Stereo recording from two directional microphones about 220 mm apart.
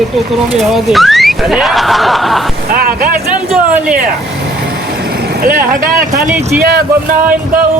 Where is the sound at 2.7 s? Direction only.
40° right (ahead or behind).